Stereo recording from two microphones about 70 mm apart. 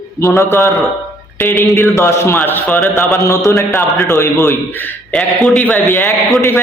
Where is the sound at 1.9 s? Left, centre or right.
Left.